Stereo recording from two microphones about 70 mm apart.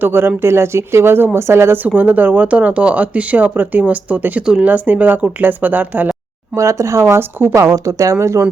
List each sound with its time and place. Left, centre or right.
0.0 s speech: right
2.0 s speech: right
6.6 s speech: right
7.5 s speech: right